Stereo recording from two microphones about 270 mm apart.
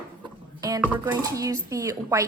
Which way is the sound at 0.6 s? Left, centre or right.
Centre.